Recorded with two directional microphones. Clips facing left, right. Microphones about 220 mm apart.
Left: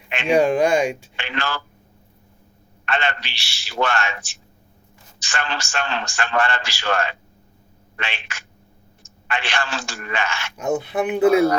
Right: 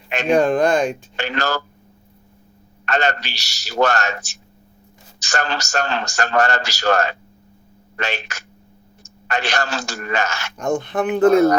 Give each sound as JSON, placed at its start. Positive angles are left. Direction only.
{"t": 0.3, "sound": "speech", "side_deg": 10}
{"t": 1.1, "sound": "a man's voice", "side_deg": -40}
{"t": 2.8, "sound": "a man's voice", "side_deg": -40}
{"t": 10.6, "sound": "speech", "side_deg": 5}